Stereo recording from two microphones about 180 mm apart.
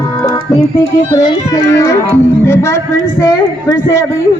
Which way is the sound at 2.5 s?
15° left (ahead or behind).